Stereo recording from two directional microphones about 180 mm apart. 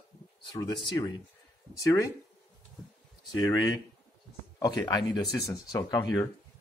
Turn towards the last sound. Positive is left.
turn(degrees=20)  # may be behind; listen again after turning